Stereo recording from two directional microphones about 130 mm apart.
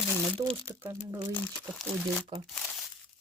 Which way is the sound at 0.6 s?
25° right (ahead or behind).